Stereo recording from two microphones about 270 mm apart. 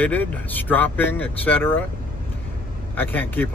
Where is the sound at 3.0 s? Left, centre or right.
Centre.